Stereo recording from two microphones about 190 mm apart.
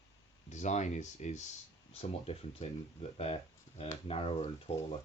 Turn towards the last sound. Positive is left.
turn(degrees=30)  # may be behind; listen again after turning